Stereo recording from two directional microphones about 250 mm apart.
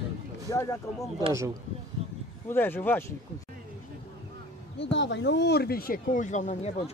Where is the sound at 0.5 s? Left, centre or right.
Centre.